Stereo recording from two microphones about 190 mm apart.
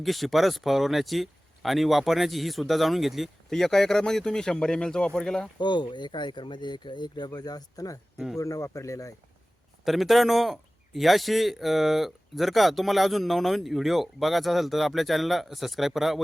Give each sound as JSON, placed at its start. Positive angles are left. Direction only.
{"t": 0.0, "sound": "a man's voice", "side_deg": 0}
{"t": 5.5, "sound": "speech", "side_deg": 25}
{"t": 9.8, "sound": "a man's voice", "side_deg": 0}